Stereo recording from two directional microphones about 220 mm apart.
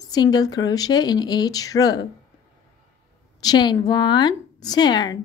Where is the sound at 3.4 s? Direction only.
20° left (ahead or behind).